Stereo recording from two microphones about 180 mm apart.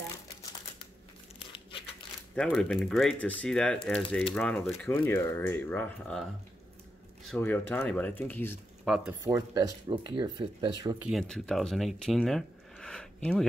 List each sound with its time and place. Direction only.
1.5 s crumpling: 30° left (ahead or behind)
2.3 s speech: 5° left (ahead or behind)
7.2 s speech: 10° left (ahead or behind)
8.8 s speech: centre (ahead or behind)
9.2 s speech: 20° right (ahead or behind)
11.1 s speech: centre (ahead or behind)